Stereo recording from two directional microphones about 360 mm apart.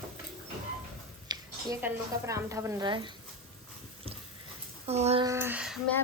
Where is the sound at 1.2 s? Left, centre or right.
Centre.